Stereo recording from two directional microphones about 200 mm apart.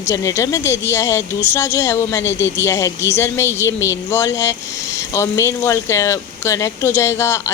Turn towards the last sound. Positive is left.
turn(degrees=15)  # may be behind; listen again after turning